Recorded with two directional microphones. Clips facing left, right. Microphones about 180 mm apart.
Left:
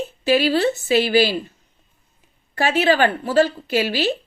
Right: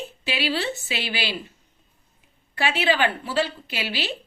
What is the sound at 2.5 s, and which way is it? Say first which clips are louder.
Speech: left 5 dB; 45° left (ahead or behind).